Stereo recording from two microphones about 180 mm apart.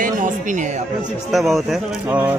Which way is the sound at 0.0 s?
45° right (ahead or behind).